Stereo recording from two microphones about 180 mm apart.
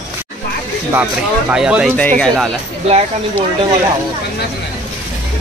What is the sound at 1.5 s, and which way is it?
Speech, 5° right (ahead or behind).